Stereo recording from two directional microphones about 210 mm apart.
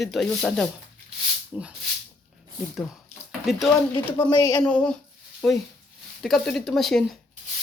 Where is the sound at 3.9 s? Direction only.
20° left (ahead or behind).